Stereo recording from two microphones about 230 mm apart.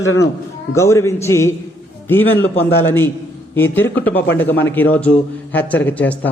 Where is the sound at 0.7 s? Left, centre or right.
Centre.